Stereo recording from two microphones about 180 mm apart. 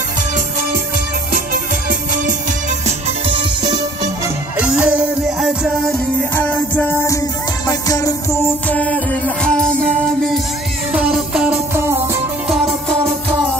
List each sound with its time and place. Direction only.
1.3 s music: 50° right (ahead or behind)
3.3 s music: 25° right (ahead or behind)
4.6 s music: 5° right (ahead or behind)
6.3 s music: 10° left (ahead or behind)
8.6 s music: 10° left (ahead or behind)
10.9 s music: 5° right (ahead or behind)
11.7 s music: 15° right (ahead or behind)
12.4 s music: centre (ahead or behind)